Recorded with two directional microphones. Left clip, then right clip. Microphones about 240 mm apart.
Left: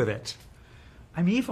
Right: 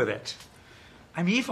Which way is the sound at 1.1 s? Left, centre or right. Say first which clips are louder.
Right 1 dB; left.